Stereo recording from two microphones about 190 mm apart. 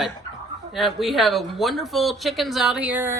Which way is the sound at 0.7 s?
Centre (ahead or behind).